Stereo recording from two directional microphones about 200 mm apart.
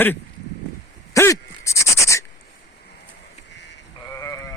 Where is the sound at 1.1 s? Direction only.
15° left (ahead or behind).